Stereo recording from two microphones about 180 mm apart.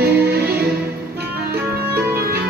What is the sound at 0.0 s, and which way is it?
Music, 60° right (ahead or behind).